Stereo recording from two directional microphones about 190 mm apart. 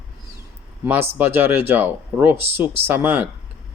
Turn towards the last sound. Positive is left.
turn(degrees=-10)  # may be behind; listen again after turning